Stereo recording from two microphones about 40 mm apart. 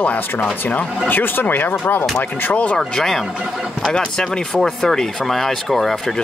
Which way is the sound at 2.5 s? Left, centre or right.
Left.